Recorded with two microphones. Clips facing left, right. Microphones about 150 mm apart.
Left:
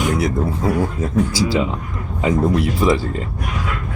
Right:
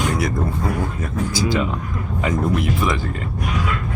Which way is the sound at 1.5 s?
20° left (ahead or behind).